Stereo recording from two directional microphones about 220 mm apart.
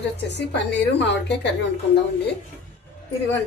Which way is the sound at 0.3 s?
50° left (ahead or behind).